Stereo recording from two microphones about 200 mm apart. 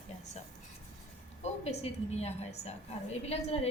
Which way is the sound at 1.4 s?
30° left (ahead or behind).